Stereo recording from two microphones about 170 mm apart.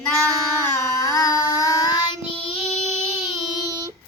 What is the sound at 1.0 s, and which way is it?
Child singing, 20° left (ahead or behind).